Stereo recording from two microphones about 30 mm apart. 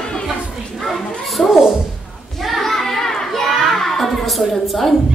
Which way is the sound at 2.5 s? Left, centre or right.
Centre.